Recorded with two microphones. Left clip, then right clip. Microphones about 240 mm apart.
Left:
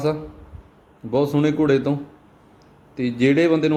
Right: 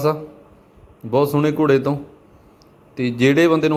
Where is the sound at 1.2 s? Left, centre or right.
Centre.